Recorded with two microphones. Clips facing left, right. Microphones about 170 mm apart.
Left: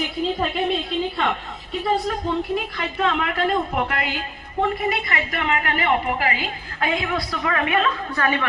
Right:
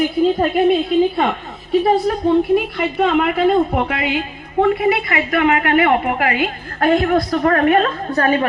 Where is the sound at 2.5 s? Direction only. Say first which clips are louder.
Right 8 dB; 60° right (ahead or behind).